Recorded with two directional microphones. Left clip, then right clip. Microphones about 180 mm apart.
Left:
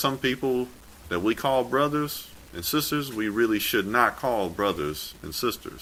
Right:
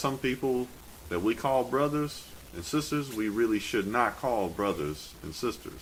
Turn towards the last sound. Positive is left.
turn(degrees=30)  # may be behind; listen again after turning